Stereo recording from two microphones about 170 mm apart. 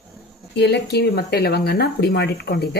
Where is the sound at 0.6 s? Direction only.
80° left.